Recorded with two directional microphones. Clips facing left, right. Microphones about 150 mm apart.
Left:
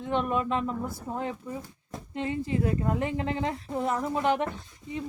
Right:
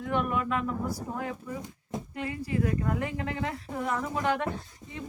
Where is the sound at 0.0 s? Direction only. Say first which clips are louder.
Left 1 dB; 25° left (ahead or behind).